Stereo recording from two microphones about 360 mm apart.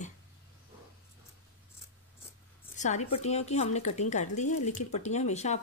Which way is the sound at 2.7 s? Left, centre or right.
Centre.